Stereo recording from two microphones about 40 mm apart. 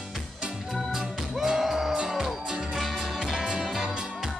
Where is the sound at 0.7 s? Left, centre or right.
Centre.